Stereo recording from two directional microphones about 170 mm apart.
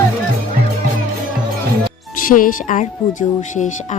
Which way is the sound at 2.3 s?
55° left (ahead or behind).